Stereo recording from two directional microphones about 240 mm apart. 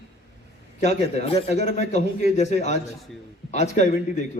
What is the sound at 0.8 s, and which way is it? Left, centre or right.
A man's voice, left.